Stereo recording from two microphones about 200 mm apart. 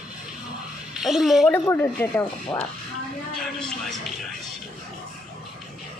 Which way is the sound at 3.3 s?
Centre (ahead or behind).